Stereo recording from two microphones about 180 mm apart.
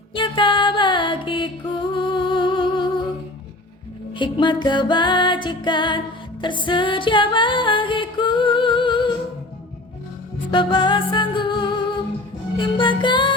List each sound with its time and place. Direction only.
0.1 s music: 25° left (ahead or behind)
4.2 s music: 25° left (ahead or behind)
10.5 s music: 25° left (ahead or behind)